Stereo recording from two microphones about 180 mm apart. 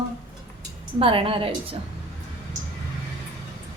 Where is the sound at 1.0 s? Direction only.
30° right (ahead or behind).